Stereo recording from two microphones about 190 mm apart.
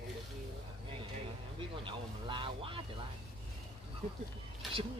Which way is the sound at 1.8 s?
25° right (ahead or behind).